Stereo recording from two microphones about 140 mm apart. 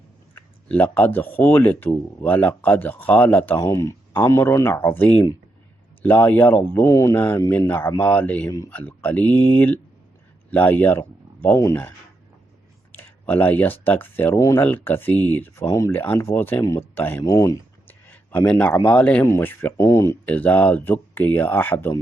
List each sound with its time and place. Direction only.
0.3 s speech: 10° left (ahead or behind)
18.1 s a man's voice: 15° left (ahead or behind)